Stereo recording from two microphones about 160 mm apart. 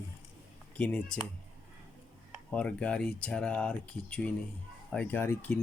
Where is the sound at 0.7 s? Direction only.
5° left (ahead or behind).